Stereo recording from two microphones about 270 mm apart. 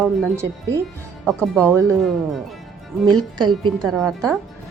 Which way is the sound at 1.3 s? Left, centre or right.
Centre.